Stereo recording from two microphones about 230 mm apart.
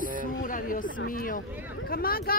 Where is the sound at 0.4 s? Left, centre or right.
Left.